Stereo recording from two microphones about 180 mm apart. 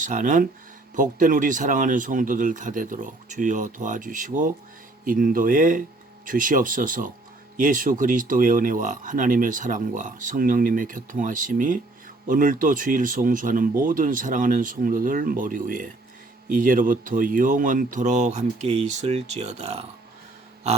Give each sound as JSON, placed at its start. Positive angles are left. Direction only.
{"t": 0.0, "sound": "speech", "side_deg": -45}